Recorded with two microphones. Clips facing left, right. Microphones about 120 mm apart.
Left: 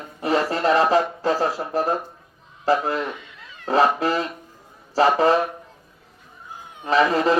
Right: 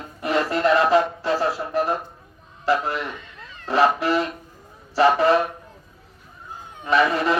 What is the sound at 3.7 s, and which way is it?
Speech, 40° left (ahead or behind).